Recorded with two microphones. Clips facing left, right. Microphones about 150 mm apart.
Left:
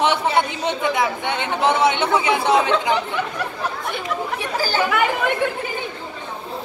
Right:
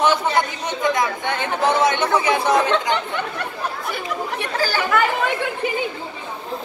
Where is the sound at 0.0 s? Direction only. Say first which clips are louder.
Even; 25° left (ahead or behind).